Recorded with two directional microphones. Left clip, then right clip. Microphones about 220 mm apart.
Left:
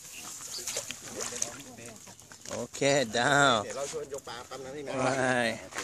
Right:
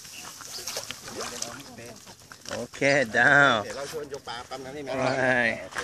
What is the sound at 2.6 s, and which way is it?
Speech, 15° left (ahead or behind).